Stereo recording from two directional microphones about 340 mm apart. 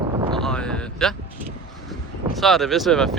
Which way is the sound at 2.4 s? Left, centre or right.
Centre.